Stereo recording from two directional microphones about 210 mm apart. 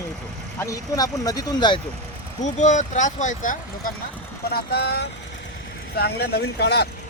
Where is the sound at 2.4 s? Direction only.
35° left (ahead or behind).